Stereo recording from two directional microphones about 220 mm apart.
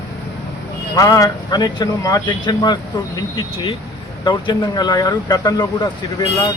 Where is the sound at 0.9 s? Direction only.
15° left (ahead or behind).